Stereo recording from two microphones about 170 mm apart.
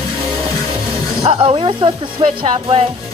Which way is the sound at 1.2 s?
30° right (ahead or behind).